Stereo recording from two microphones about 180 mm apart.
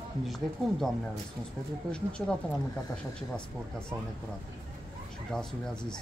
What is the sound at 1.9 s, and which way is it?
Speech, 5° left (ahead or behind).